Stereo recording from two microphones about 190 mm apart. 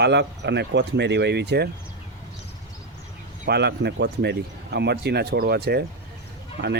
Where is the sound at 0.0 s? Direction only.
65° right (ahead or behind).